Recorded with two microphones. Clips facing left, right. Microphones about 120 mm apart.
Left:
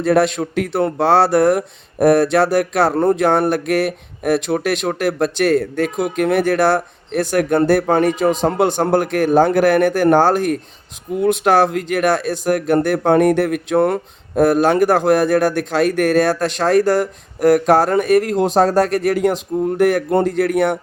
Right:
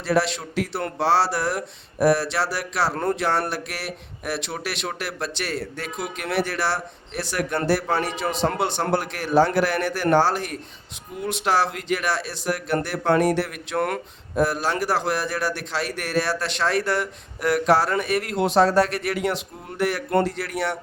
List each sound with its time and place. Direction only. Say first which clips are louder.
0.0 s a man's voice: left 7 dB; 50° left (ahead or behind)
2.9 s speech: left 9 dB; 25° left (ahead or behind)
3.2 s a man's voice: left 9 dB; 50° left (ahead or behind)
13.7 s speech: left 8 dB; 30° left (ahead or behind)
14.3 s a man's voice: left 9 dB; 50° left (ahead or behind)